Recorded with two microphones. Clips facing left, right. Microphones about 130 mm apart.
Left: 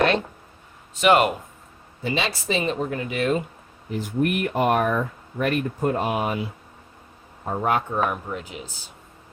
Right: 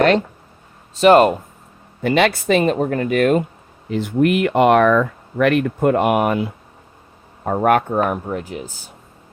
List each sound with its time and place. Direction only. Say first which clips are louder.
0.9 s speech: right 7 dB; 35° right (ahead or behind)
2.0 s speech: right 10 dB; 60° right (ahead or behind)
3.8 s speech: right 7 dB; 85° right; by 8.0 s 55° right (ahead or behind)
8.1 s speech: right 7 dB; 40° right (ahead or behind)